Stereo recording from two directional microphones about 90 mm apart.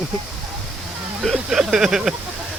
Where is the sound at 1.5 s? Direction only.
5° right (ahead or behind).